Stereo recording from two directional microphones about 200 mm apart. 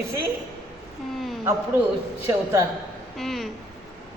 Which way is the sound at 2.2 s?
15° right (ahead or behind).